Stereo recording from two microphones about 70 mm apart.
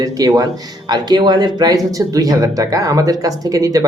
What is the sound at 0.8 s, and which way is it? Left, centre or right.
Speech, right.